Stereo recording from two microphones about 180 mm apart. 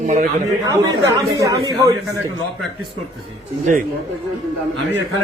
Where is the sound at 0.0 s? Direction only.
45° right (ahead or behind).